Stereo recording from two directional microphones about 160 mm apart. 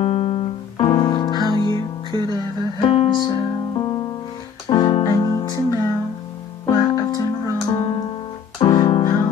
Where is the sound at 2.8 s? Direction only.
30° left (ahead or behind).